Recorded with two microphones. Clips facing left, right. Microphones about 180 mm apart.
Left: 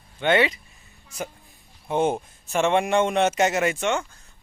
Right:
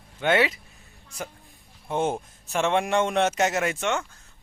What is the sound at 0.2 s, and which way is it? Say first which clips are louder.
Speech: left 2 dB; 5° right (ahead or behind).